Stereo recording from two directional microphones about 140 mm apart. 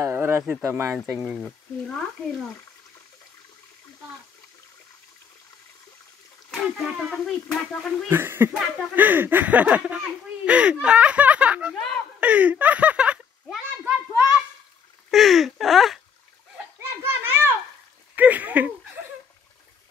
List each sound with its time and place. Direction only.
0.0 s speech: 20° right (ahead or behind)
1.1 s speech: 5° right (ahead or behind)
6.5 s speech: centre (ahead or behind)
8.1 s speech: 15° right (ahead or behind)
11.7 s a sound: 5° left (ahead or behind)
12.2 s a child's voice: 10° right (ahead or behind)
15.0 s speech: centre (ahead or behind)
17.0 s children playing: 15° right (ahead or behind)
18.1 s a sound: 10° right (ahead or behind)